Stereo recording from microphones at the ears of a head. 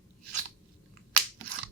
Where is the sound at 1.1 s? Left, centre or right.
Right.